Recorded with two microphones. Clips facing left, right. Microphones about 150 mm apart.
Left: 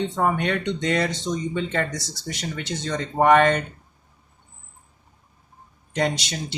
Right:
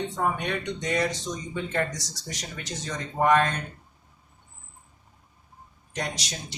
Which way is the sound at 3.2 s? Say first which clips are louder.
Left 5 dB; 70° left (ahead or behind).